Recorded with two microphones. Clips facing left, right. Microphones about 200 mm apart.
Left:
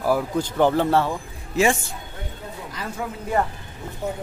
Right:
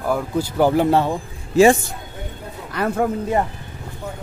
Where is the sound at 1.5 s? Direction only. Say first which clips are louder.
Right 7 dB; 35° right (ahead or behind).